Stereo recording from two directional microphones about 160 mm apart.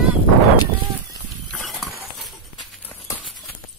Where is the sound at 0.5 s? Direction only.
25° left (ahead or behind).